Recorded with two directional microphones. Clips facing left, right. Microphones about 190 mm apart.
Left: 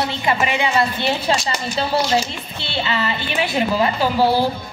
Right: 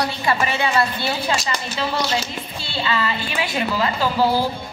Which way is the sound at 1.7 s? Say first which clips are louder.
Left 5 dB; 30° left (ahead or behind).